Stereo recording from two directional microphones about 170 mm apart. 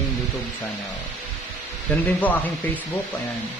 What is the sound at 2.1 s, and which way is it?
Speech, 10° left (ahead or behind).